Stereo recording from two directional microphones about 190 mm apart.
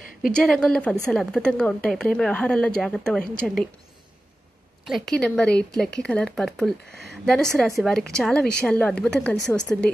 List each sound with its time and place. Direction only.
0.3 s a woman's voice: 5° left (ahead or behind)
4.8 s a woman's voice: centre (ahead or behind)